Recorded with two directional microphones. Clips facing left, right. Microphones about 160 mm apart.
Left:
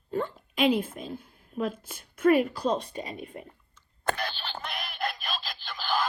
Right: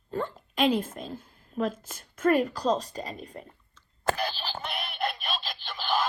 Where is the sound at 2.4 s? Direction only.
40° right (ahead or behind).